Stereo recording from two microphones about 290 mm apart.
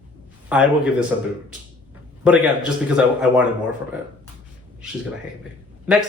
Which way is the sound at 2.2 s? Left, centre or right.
Centre.